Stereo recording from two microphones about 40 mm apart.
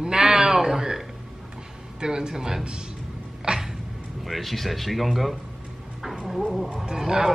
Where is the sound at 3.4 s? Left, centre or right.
Centre.